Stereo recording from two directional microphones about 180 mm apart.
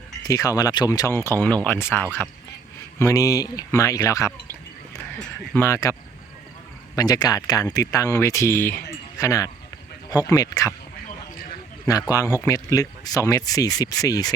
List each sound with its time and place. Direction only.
0.3 s speech: 20° left (ahead or behind)
5.5 s speech: 15° left (ahead or behind)
11.9 s speech: 20° left (ahead or behind)